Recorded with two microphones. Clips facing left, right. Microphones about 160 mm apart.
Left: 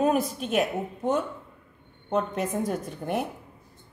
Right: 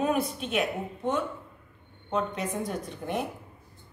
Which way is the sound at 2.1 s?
45° left (ahead or behind).